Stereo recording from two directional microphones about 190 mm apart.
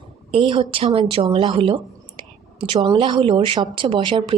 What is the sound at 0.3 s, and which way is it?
A woman's voice, 30° right (ahead or behind).